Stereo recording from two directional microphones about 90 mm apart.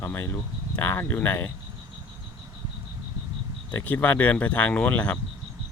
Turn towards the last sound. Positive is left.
turn(degrees=15)  # may be behind; listen again after turning